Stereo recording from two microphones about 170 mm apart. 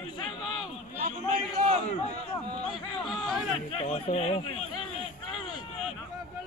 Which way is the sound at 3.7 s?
35° left (ahead or behind).